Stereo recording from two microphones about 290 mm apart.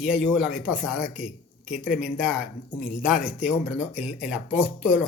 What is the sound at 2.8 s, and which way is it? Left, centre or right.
Speech, left.